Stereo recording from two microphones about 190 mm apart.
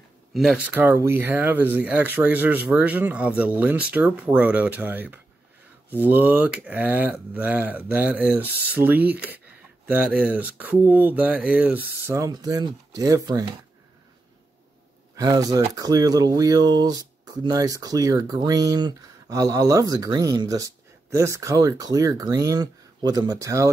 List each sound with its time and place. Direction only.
0.3 s speech: centre (ahead or behind)
12.1 s speech: 20° right (ahead or behind)
15.1 s speech: 20° right (ahead or behind)